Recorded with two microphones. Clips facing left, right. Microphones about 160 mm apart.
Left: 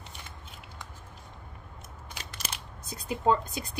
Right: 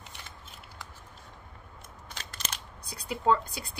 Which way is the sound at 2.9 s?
20° left (ahead or behind).